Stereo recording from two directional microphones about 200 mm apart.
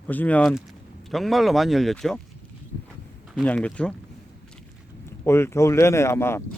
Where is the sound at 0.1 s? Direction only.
10° left (ahead or behind).